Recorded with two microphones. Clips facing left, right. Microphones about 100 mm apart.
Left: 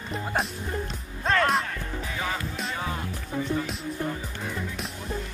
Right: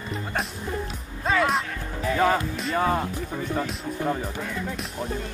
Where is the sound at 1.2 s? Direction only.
5° right (ahead or behind).